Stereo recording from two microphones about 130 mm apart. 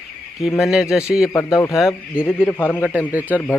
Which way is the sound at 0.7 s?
5° right (ahead or behind).